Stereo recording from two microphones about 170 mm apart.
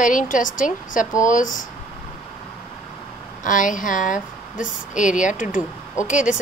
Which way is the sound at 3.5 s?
50° left (ahead or behind).